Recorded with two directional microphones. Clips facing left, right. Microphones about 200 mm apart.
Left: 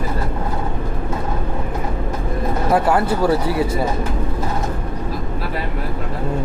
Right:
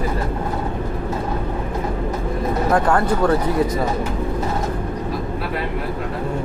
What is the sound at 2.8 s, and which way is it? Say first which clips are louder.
Speech: left 1 dB; 5° left (ahead or behind).